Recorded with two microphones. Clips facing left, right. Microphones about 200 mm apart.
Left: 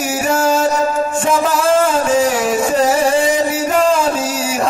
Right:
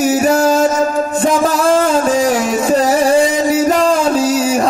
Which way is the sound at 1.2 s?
35° right (ahead or behind).